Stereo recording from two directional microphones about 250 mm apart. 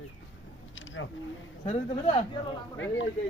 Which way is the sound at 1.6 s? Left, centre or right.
Left.